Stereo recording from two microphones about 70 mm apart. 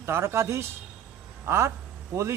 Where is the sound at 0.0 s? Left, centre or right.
Right.